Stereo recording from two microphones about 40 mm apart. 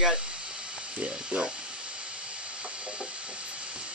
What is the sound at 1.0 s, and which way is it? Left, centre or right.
Speech, right.